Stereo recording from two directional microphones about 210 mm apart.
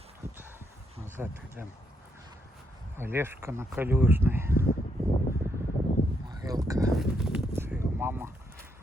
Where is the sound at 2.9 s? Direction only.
10° right (ahead or behind).